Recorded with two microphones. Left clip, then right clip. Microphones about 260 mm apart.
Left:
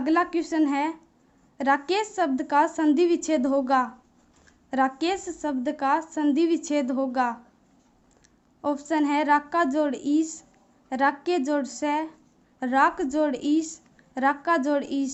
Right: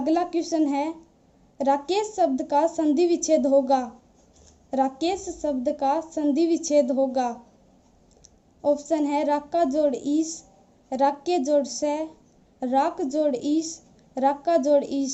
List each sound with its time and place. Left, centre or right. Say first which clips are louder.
0.0 s a woman's voice: even; centre
8.6 s a woman's voice: right 2 dB; left